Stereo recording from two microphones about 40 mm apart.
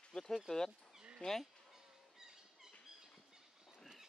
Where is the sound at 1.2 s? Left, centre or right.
Left.